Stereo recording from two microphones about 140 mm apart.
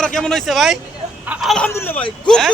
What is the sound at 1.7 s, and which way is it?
Speech, 15° left (ahead or behind).